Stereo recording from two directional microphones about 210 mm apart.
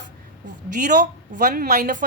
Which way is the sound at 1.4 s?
40° right (ahead or behind).